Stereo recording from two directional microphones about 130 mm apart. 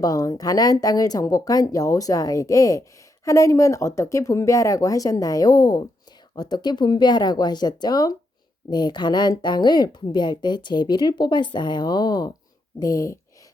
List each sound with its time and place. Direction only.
0.0 s a woman's voice: 30° left (ahead or behind)